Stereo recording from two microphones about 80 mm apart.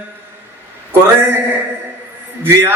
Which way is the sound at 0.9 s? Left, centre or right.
Right.